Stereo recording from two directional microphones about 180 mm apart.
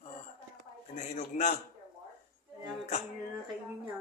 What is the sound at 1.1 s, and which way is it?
Speech, 40° left (ahead or behind).